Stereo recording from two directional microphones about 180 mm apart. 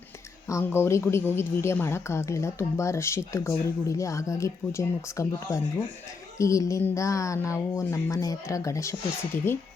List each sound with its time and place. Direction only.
0.4 s a woman's voice: 15° left (ahead or behind)